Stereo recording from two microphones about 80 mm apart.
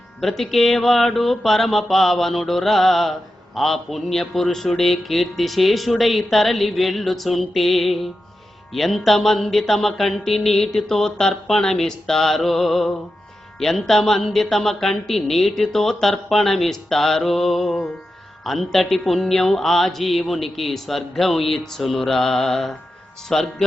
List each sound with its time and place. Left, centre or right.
0.2 s mantra: centre
23.3 s speech: centre